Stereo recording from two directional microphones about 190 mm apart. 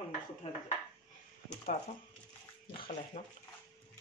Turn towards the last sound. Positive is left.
turn(degrees=35)  # may be behind; listen again after turning